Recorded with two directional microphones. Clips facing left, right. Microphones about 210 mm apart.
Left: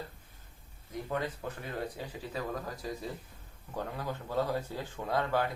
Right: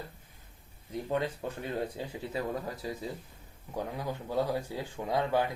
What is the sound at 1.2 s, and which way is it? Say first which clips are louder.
Speech: right 3 dB; 30° right (ahead or behind).